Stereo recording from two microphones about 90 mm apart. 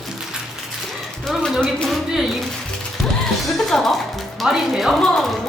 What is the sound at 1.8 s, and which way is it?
Speech, centre (ahead or behind).